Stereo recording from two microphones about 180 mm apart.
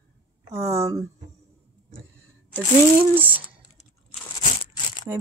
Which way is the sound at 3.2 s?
10° right (ahead or behind).